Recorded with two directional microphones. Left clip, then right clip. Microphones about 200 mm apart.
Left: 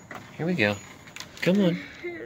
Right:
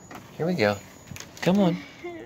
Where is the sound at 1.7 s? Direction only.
45° right (ahead or behind).